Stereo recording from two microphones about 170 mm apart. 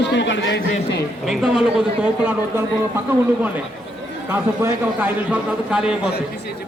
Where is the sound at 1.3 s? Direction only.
5° right (ahead or behind).